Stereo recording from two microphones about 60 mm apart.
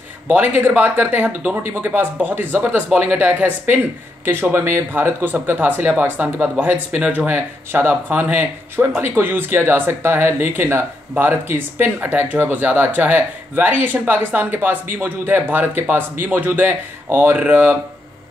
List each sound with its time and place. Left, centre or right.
0.3 s speech: right